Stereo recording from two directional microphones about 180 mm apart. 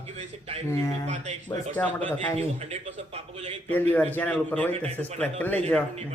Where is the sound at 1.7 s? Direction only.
10° left (ahead or behind).